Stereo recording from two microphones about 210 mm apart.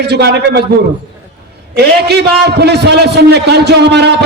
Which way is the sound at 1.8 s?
50° right (ahead or behind).